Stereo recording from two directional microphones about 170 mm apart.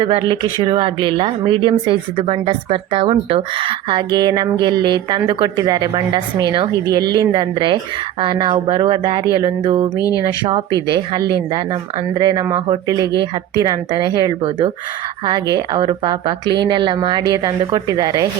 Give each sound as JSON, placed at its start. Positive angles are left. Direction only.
{"t": 0.0, "sound": "speech", "side_deg": -30}
{"t": 10.0, "sound": "speech", "side_deg": 20}
{"t": 10.4, "sound": "speech", "side_deg": -30}